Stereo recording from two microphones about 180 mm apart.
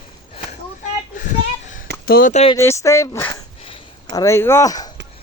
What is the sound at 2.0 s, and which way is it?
Speech, 55° left (ahead or behind).